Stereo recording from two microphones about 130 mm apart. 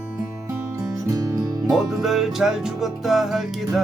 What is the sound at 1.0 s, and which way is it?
Music, 25° right (ahead or behind).